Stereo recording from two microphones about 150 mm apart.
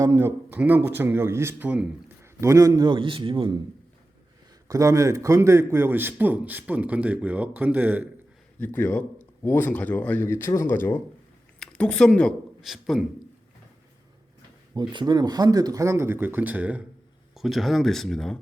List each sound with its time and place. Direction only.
0.0 s speech: 15° right (ahead or behind); by 3.6 s 35° right (ahead or behind)
4.7 s speech: 20° right (ahead or behind)
8.5 s speech: 10° left (ahead or behind)
11.6 s speech: 5° left (ahead or behind)
14.8 s speech: 30° right (ahead or behind); by 18.3 s centre (ahead or behind)